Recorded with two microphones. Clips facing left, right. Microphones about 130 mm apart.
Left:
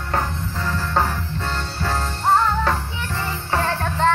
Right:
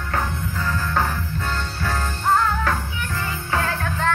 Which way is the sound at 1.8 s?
30° left (ahead or behind).